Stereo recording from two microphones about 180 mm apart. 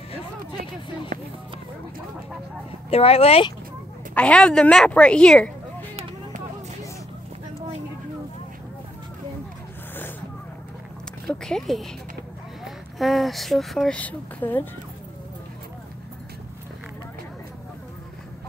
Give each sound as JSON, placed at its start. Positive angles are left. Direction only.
{"t": 2.9, "sound": "speech", "side_deg": 35}
{"t": 4.1, "sound": "a woman's voice", "side_deg": 5}
{"t": 11.2, "sound": "speech", "side_deg": 0}